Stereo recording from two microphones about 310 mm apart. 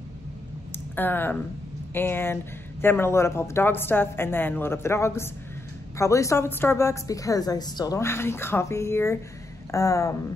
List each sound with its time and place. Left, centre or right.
0.9 s a woman's voice: centre